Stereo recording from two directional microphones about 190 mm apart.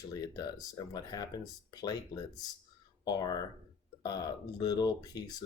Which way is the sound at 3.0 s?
20° left (ahead or behind).